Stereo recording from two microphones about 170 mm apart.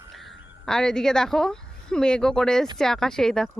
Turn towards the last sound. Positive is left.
turn(degrees=5)  # may be behind; listen again after turning